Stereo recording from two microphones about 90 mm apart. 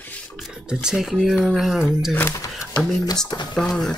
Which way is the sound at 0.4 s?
10° right (ahead or behind).